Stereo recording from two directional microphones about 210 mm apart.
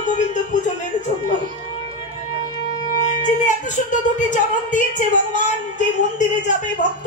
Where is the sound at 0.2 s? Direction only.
35° left (ahead or behind).